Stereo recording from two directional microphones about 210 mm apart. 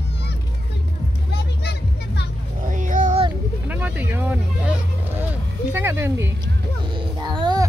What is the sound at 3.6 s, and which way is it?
Vehicle, 5° right (ahead or behind).